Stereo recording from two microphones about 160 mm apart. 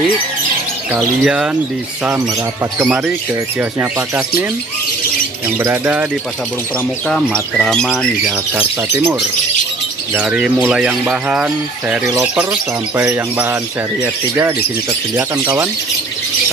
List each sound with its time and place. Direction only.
0.9 s speech: 5° right (ahead or behind)
2.8 s speech: 10° right (ahead or behind)
5.6 s speech: 10° right (ahead or behind)
7.5 s speech: 5° left (ahead or behind)
10.1 s speech: 5° right (ahead or behind)